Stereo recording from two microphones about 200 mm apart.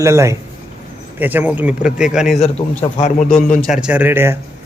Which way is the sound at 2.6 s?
35° left (ahead or behind).